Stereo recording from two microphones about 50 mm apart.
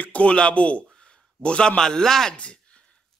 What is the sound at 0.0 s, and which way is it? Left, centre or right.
A man's voice, left.